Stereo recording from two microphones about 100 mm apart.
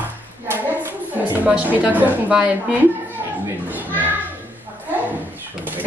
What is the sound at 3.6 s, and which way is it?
Children playing, 15° right (ahead or behind).